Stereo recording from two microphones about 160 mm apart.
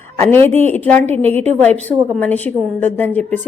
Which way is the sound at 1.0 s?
40° right (ahead or behind).